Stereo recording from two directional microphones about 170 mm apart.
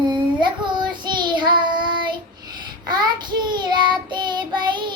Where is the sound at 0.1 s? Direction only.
25° right (ahead or behind).